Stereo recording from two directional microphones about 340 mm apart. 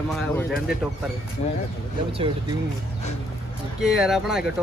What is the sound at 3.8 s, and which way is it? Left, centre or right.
Speech, centre.